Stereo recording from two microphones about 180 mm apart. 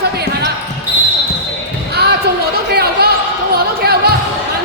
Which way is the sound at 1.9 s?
65° right (ahead or behind).